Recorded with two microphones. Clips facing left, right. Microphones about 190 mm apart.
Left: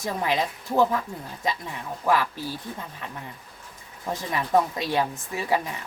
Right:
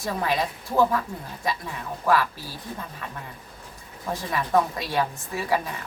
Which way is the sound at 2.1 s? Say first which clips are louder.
Right 1 dB; 15° left (ahead or behind).